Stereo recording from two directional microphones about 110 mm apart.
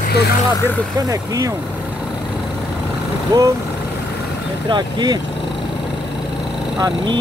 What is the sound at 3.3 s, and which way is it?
Speech, 30° right (ahead or behind).